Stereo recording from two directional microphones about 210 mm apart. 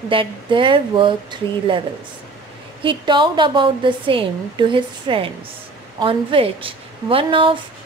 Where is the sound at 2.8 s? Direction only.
25° right (ahead or behind).